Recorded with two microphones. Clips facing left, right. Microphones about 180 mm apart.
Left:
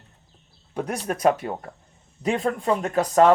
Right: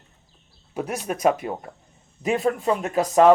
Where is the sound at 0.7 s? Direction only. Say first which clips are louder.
Even; 5° right (ahead or behind).